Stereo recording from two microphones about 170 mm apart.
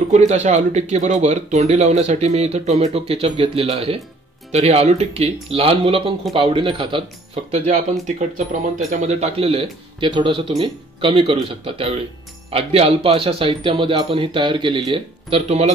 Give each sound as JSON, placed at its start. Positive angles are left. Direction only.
{"t": 0.1, "sound": "speech", "side_deg": -40}
{"t": 7.5, "sound": "speech", "side_deg": -45}